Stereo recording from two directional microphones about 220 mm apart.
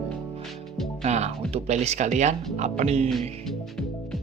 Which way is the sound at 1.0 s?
30° right (ahead or behind).